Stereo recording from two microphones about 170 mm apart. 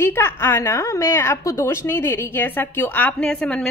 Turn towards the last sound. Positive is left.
turn(degrees=5)  # may be behind; listen again after turning